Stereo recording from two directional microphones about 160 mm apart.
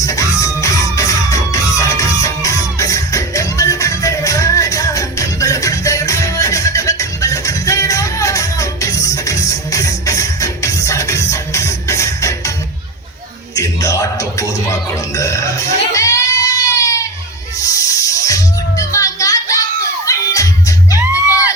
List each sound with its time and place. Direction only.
0.0 s music: 20° left (ahead or behind)
13.6 s a sound: 20° left (ahead or behind)
15.1 s music: 20° left (ahead or behind)